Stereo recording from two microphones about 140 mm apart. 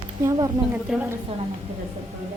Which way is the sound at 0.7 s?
10° right (ahead or behind).